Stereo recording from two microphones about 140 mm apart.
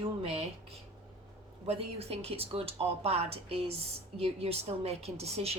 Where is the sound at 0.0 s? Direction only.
45° right (ahead or behind).